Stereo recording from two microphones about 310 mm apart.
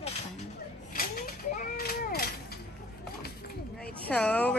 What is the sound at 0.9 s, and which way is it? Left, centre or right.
Mechanisms, left.